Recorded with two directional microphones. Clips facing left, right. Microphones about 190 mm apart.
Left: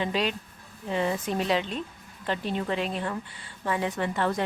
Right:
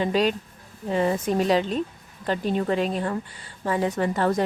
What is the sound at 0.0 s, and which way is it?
A woman's voice, 40° right (ahead or behind).